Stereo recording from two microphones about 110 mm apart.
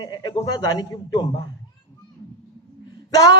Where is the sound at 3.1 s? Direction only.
35° left (ahead or behind).